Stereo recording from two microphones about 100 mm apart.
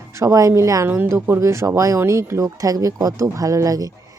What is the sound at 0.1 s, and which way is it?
Speech, 30° right (ahead or behind).